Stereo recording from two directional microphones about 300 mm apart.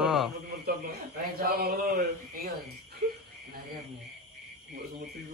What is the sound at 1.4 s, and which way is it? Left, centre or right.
Speech, right.